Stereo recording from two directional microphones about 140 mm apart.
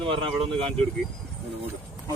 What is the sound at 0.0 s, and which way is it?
Speech, 40° right (ahead or behind).